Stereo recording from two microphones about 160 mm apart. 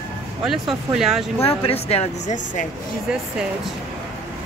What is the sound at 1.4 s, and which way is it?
Speech, 35° left (ahead or behind).